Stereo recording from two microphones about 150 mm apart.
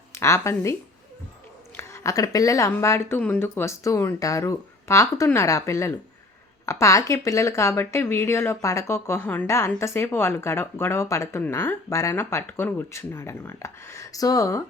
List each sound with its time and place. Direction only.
0.1 s speech: 15° left (ahead or behind)